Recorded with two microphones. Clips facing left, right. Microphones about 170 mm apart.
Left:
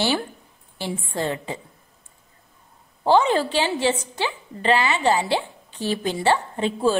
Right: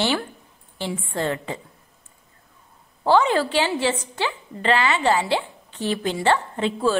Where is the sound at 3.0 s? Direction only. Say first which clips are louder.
Even; 20° left (ahead or behind).